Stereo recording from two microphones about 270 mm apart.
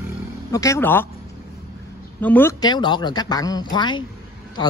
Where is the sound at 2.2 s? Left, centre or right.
Centre.